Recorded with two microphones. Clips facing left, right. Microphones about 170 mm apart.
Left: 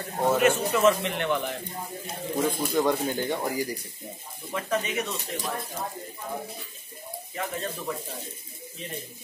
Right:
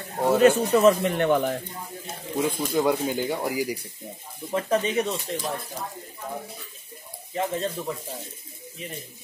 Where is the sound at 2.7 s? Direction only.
10° right (ahead or behind).